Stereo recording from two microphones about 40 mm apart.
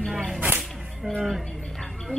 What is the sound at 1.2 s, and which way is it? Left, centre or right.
Music, centre.